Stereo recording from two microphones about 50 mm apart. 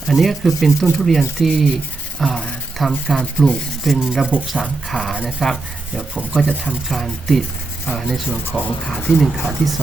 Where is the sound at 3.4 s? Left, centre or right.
Left.